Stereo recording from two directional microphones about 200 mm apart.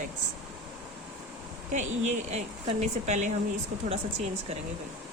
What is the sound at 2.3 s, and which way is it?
A woman's voice, 35° right (ahead or behind).